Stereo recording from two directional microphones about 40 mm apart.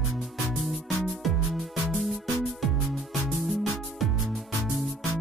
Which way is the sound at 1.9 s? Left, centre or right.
Centre.